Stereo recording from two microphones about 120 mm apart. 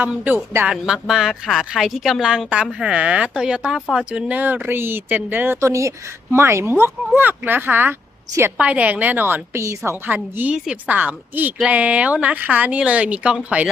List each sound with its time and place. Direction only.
0.0 s speech: 15° right (ahead or behind)
0.7 s a woman's voice: 5° right (ahead or behind)